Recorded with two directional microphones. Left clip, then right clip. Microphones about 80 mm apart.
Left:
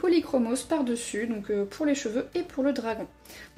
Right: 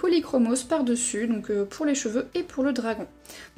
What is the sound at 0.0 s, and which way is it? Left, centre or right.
Speech, right.